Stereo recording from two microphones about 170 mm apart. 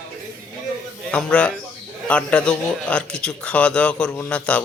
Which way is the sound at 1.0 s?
5° left (ahead or behind).